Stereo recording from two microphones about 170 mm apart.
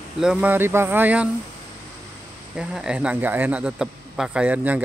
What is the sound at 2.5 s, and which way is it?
A man's voice, 5° right (ahead or behind).